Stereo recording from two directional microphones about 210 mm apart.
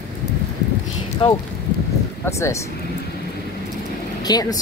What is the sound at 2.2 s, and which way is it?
Speech, 15° left (ahead or behind).